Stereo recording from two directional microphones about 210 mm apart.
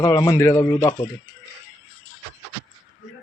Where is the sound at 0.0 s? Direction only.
15° left (ahead or behind).